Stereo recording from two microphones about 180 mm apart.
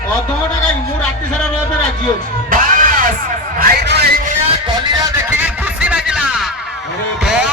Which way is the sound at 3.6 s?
65° right (ahead or behind).